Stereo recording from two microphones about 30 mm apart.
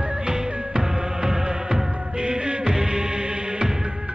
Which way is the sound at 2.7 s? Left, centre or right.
Centre.